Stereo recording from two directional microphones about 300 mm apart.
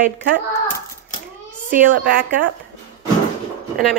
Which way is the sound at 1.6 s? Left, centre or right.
Right.